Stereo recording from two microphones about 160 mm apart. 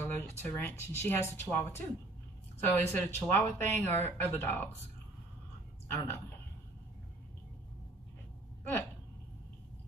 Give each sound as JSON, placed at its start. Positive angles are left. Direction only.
{"t": 0.0, "sound": "speech", "side_deg": 10}
{"t": 5.9, "sound": "speech", "side_deg": 15}